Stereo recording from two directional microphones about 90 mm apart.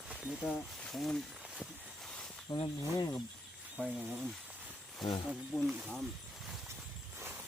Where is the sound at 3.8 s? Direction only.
15° right (ahead or behind).